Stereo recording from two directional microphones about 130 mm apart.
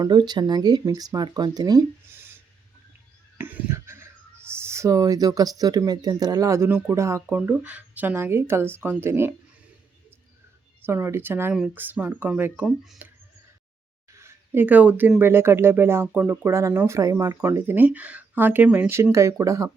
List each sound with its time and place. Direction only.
0.0 s speech: 35° right (ahead or behind)
3.3 s a sound: 15° right (ahead or behind)
4.5 s speech: 20° right (ahead or behind)
7.3 s speech: 10° right (ahead or behind)
10.8 s speech: 20° right (ahead or behind)
11.5 s speech: 5° right (ahead or behind)
12.6 s speech: centre (ahead or behind)
14.1 s a sound: 20° right (ahead or behind)
15.2 s speech: 20° right (ahead or behind)